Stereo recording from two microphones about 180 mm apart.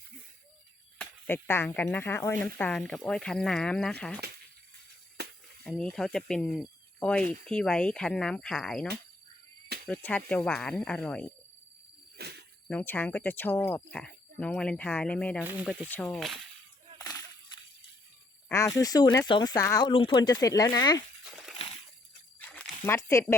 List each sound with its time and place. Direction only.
0.9 s speech: 10° left (ahead or behind)
5.6 s speech: centre (ahead or behind)
9.9 s speech: 5° left (ahead or behind)
12.1 s a sound: 65° right (ahead or behind)
12.6 s speech: 10° left (ahead or behind)
15.4 s speech: 10° right (ahead or behind)
15.9 s speech: 10° left (ahead or behind)
17.0 s a sound: 20° left (ahead or behind)
18.4 s speech: 15° left (ahead or behind)
19.9 s speech: 30° left (ahead or behind)
22.4 s a sound: 5° left (ahead or behind)